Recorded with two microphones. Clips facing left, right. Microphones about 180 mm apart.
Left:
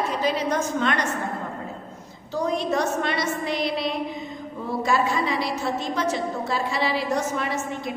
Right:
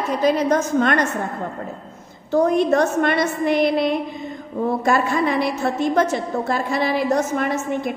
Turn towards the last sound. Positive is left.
turn(degrees=-50)  # may be behind; listen again after turning